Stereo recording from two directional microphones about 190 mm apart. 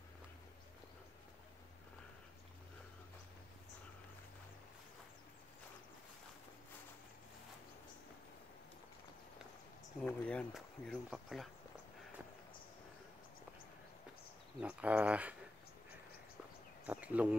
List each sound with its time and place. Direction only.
10.0 s speech: 5° left (ahead or behind)
14.6 s speech: 5° right (ahead or behind)
16.8 s speech: 5° right (ahead or behind)